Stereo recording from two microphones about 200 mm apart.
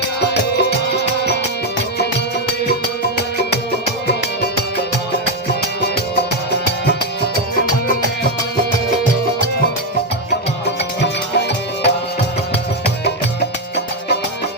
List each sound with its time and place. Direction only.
0.2 s music: 55° left (ahead or behind)
11.0 s music: 55° left (ahead or behind)